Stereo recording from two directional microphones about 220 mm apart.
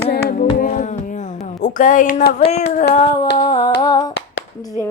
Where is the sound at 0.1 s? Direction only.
40° left (ahead or behind).